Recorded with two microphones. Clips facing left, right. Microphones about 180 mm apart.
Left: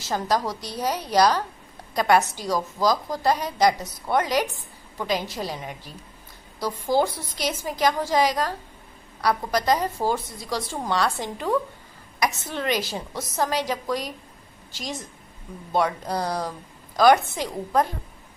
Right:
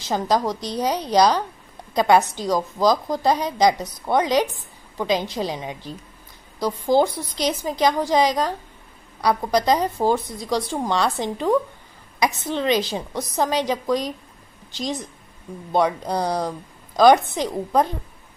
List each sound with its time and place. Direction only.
0.0 s a woman's voice: 20° right (ahead or behind)